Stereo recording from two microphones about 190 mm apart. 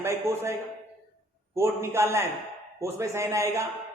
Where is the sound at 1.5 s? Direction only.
15° right (ahead or behind).